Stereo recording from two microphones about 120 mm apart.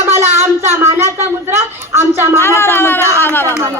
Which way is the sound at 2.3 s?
20° left (ahead or behind).